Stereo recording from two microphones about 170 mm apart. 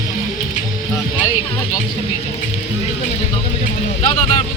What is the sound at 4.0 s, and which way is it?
Speech, 25° left (ahead or behind).